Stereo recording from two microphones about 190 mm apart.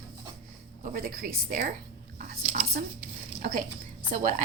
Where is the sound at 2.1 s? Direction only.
45° right (ahead or behind).